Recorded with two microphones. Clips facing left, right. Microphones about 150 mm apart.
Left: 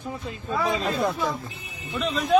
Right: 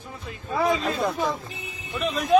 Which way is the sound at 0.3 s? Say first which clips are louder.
Right 3 dB; 25° left (ahead or behind).